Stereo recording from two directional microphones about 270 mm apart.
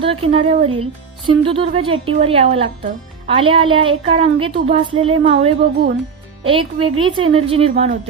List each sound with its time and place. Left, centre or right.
0.0 s speech: right